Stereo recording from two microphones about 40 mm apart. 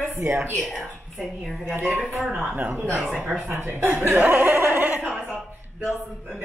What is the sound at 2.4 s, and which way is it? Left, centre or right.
Speech, right.